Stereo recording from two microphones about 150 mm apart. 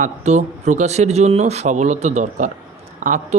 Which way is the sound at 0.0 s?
50° right (ahead or behind).